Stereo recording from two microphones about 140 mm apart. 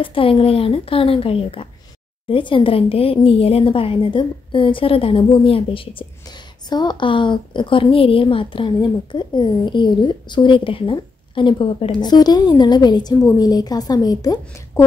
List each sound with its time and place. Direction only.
0.0 s a woman's voice: 40° left (ahead or behind)